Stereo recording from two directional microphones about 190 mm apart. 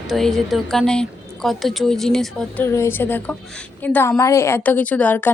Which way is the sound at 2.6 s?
15° left (ahead or behind).